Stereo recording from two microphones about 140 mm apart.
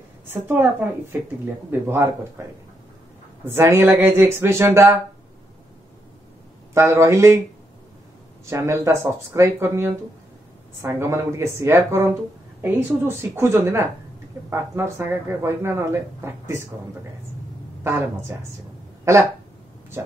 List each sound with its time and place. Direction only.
0.3 s speech: 15° right (ahead or behind)
3.4 s speech: 20° right (ahead or behind)
6.7 s a woman's voice: 20° right (ahead or behind)
8.5 s a woman's voice: 20° right (ahead or behind)
17.8 s a woman's voice: 20° right (ahead or behind)